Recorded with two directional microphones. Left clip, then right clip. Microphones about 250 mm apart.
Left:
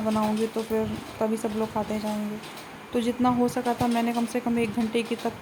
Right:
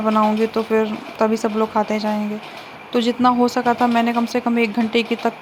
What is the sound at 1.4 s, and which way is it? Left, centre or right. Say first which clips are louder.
Speech: right 9 dB; centre.